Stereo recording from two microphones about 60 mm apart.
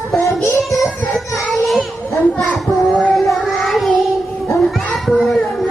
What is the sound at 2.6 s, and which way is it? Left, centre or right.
Child singing, centre.